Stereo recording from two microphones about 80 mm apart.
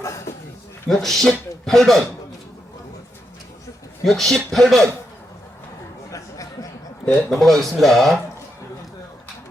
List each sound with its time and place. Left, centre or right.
0.0 s a sound: left
0.9 s speech: centre
4.0 s speech: centre
6.1 s a sound: left
7.0 s a man's voice: centre
7.3 s speech: centre